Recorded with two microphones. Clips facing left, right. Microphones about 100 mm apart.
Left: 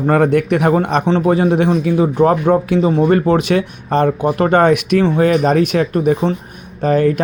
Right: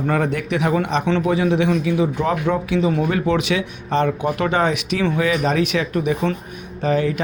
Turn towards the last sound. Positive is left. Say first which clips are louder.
# left 6 dB
turn(degrees=50)  # may be behind; listen again after turning